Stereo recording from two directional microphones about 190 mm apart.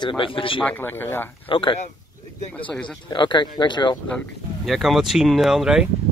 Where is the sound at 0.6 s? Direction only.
10° left (ahead or behind).